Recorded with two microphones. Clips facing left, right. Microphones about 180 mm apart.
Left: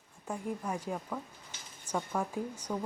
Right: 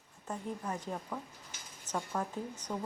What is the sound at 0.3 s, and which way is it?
Speech, 10° left (ahead or behind).